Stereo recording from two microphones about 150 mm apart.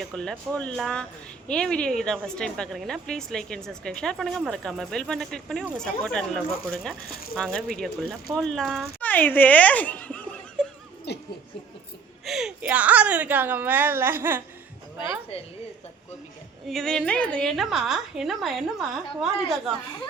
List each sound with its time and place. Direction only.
0.0 s a woman's voice: 5° left (ahead or behind)
11.1 s a sound: 90° left
12.2 s a woman's voice: 5° right (ahead or behind)
16.6 s a woman's voice: 5° left (ahead or behind)